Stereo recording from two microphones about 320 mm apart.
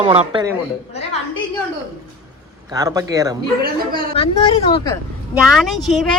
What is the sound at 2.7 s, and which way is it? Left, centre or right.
Speech, centre.